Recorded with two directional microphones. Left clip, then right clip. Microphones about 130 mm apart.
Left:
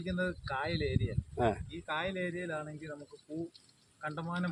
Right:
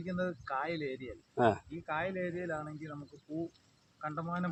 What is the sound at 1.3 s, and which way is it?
Speech, 65° right (ahead or behind).